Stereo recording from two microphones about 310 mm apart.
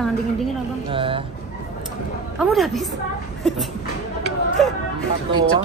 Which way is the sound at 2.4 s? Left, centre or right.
Centre.